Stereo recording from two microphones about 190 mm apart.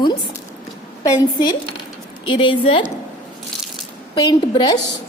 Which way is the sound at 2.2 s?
25° left (ahead or behind).